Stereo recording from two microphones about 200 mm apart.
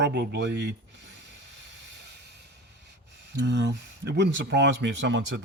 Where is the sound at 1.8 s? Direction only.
60° right (ahead or behind).